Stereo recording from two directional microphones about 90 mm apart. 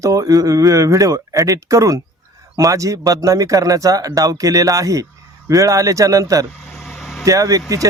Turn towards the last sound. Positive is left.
turn(degrees=-40)  # may be behind; listen again after turning